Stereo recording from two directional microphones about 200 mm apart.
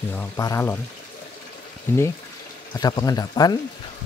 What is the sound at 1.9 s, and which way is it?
Speech, 10° left (ahead or behind).